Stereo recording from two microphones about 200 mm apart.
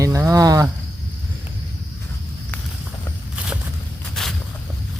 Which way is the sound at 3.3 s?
5° right (ahead or behind).